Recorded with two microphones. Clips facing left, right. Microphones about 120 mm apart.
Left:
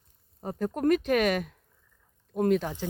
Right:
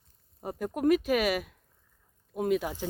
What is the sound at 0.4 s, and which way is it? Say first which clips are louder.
Speech: left 1 dB; 10° right (ahead or behind).